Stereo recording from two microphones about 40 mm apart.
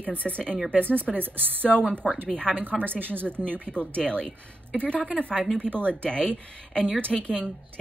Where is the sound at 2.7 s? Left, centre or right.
Left.